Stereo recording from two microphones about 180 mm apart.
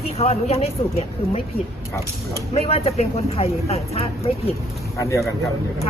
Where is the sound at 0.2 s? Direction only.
35° left (ahead or behind).